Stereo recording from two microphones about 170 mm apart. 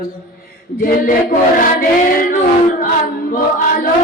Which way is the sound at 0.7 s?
60° left (ahead or behind).